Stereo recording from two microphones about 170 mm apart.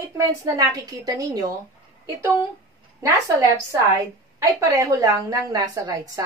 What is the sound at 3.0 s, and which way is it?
A woman's voice, 20° right (ahead or behind).